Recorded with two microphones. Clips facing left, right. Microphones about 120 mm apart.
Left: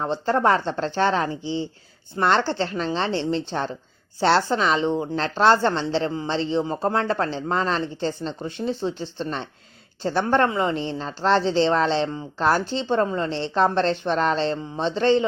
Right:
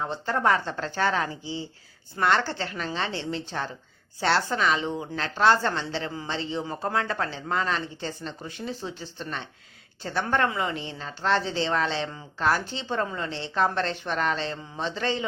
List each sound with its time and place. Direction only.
0.0 s a woman's voice: 30° left (ahead or behind)